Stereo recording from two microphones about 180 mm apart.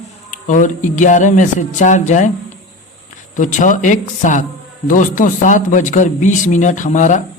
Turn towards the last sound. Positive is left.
turn(degrees=45)  # may be behind; listen again after turning